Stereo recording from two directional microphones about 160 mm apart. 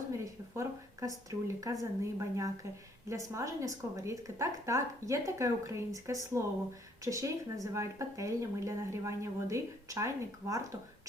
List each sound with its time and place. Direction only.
0.1 s a woman's voice: 20° right (ahead or behind)